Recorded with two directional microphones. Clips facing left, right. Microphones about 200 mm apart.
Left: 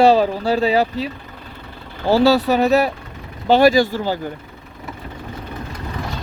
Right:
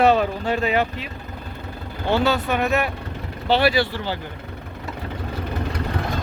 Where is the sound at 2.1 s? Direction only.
35° left (ahead or behind).